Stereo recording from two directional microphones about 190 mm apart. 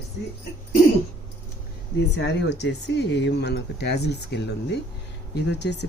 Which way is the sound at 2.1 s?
65° left (ahead or behind).